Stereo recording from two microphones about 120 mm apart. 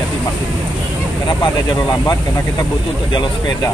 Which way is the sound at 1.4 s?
35° left (ahead or behind).